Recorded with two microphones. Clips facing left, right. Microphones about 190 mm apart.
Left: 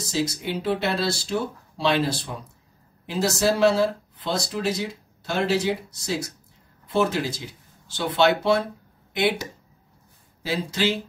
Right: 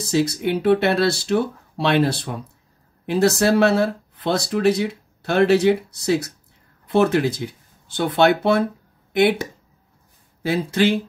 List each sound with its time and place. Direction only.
0.1 s speech: 60° right (ahead or behind)